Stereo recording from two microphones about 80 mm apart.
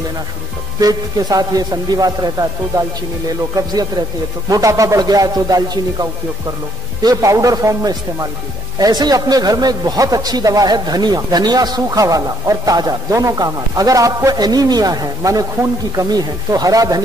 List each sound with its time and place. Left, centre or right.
0.7 s a man's voice: right
3.5 s a man's voice: right